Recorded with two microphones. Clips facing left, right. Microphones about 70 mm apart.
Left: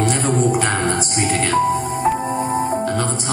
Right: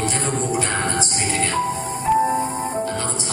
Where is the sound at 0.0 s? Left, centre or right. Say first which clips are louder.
Left 6 dB; left.